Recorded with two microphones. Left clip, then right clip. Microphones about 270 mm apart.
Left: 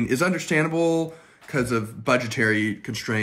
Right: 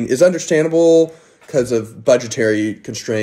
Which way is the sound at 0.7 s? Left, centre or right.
Left.